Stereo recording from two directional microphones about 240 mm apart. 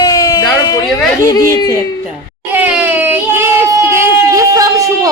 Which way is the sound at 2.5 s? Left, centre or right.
Centre.